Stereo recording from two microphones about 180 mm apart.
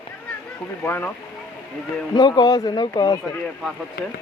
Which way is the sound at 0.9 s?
10° left (ahead or behind).